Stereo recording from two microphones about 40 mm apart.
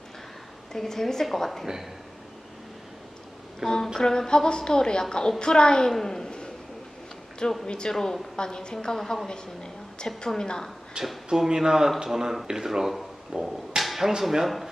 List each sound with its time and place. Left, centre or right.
0.7 s a woman's voice: centre
1.6 s speech: centre
3.6 s speech: centre
3.9 s a woman's voice: centre
5.9 s a sound: centre
7.7 s a woman's voice: centre
10.2 s a woman's voice: centre
11.0 s speech: right; by 14.7 s centre